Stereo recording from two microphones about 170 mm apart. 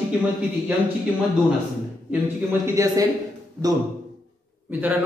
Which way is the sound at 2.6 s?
20° right (ahead or behind).